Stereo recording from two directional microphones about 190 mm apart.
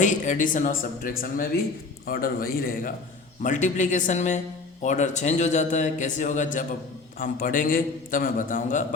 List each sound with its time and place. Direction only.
0.0 s a man's voice: 40° left (ahead or behind)